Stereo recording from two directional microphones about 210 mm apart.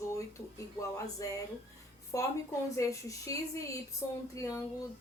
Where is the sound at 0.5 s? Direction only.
15° left (ahead or behind).